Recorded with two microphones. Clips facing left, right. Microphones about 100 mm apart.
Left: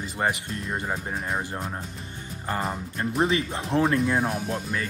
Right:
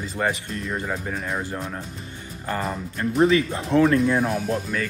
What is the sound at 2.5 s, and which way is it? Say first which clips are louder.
Speech: right 2 dB; 30° left (ahead or behind).